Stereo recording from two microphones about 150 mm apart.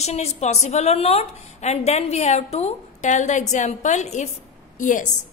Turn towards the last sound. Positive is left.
turn(degrees=60)  # may be behind; listen again after turning